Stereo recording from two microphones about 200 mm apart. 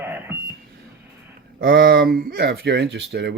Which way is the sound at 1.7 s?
50° right (ahead or behind).